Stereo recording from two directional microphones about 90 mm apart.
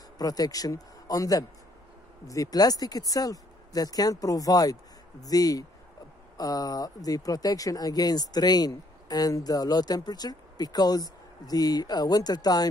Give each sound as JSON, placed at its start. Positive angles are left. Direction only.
{"t": 0.2, "sound": "speech", "side_deg": 45}